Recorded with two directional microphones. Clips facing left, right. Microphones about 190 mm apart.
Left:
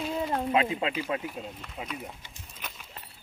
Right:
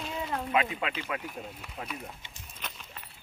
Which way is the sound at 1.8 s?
15° left (ahead or behind).